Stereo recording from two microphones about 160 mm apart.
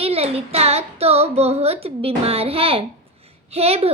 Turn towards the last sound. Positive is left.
turn(degrees=-40)  # may be behind; listen again after turning